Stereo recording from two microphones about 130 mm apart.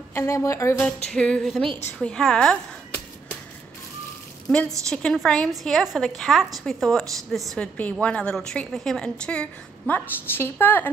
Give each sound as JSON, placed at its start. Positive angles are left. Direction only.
{"t": 0.1, "sound": "speech", "side_deg": 20}
{"t": 1.1, "sound": "a woman's voice", "side_deg": 5}
{"t": 4.5, "sound": "a woman's voice", "side_deg": 10}